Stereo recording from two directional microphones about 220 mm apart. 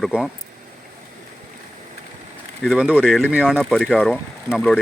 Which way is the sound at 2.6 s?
Centre (ahead or behind).